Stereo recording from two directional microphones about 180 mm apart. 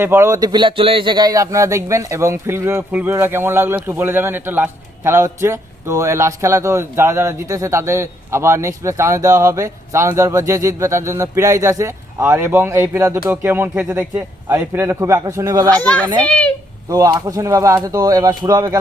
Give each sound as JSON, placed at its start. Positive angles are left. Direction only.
{"t": 0.0, "sound": "a man's voice", "side_deg": -15}
{"t": 16.1, "sound": "a child's voice", "side_deg": 5}
{"t": 16.9, "sound": "speech", "side_deg": -20}